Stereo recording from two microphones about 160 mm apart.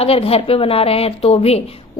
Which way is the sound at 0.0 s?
35° left (ahead or behind).